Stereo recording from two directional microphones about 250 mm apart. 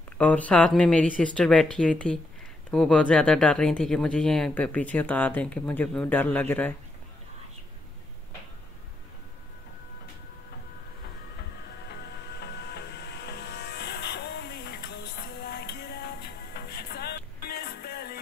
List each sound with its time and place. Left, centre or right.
0.2 s speech: centre
12.4 s music: left